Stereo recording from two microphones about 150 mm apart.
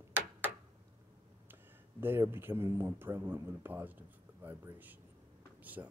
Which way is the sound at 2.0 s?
15° right (ahead or behind).